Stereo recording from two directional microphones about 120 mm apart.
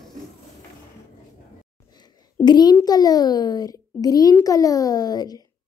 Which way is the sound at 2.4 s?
35° left (ahead or behind).